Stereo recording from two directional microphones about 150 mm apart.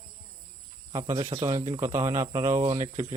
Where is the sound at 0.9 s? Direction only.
20° right (ahead or behind).